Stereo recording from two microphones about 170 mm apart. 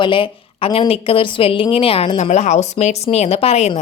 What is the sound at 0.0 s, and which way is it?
A woman's voice, 30° left (ahead or behind).